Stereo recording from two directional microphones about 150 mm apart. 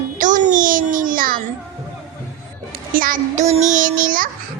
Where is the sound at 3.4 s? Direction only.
50° right (ahead or behind); by 4.3 s 65° right (ahead or behind).